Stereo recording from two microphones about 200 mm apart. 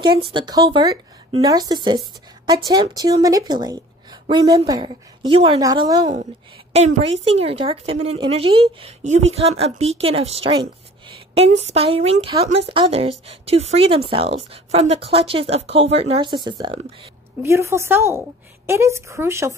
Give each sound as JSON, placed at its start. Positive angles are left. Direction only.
{"t": 0.0, "sound": "a woman's voice", "side_deg": -25}
{"t": 6.7, "sound": "a woman's voice", "side_deg": -30}
{"t": 17.4, "sound": "speech", "side_deg": -15}